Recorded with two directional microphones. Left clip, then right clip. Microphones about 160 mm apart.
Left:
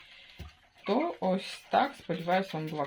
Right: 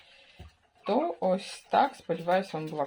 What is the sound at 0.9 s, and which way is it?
Speech, 5° right (ahead or behind).